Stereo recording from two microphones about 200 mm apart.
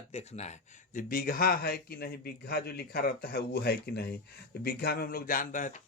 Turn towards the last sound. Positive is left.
turn(degrees=40)  # may be behind; listen again after turning